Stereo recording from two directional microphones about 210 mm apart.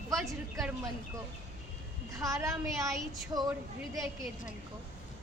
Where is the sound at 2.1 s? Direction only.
15° right (ahead or behind).